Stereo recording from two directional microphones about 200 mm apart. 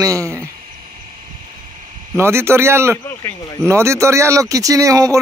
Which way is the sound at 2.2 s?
10° right (ahead or behind).